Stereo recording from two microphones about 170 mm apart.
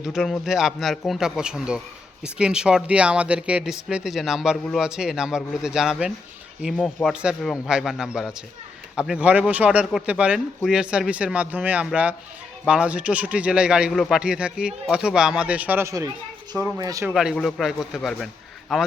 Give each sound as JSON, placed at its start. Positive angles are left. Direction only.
{"t": 0.0, "sound": "a man's voice", "side_deg": 0}
{"t": 17.1, "sound": "speech", "side_deg": 0}